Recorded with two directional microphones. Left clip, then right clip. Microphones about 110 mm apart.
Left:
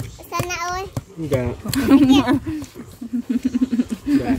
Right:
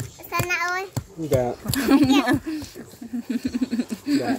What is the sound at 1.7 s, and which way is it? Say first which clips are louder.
Speech: left 5 dB; 25° left (ahead or behind).